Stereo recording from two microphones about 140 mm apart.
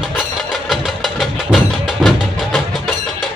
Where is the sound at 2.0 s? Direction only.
Centre (ahead or behind).